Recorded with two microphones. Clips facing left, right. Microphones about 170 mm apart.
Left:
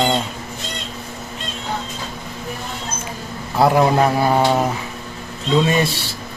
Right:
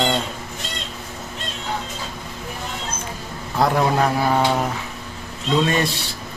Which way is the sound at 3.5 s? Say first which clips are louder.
Left 4 dB; 5° left (ahead or behind).